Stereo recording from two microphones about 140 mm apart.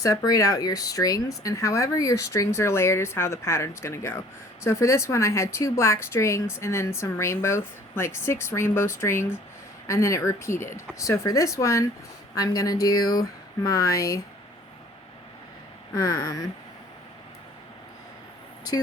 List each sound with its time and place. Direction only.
0.0 s a woman's voice: 25° left (ahead or behind)
16.0 s a woman's voice: 25° left (ahead or behind)